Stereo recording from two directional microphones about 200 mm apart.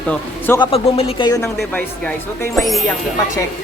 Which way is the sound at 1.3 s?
15° left (ahead or behind).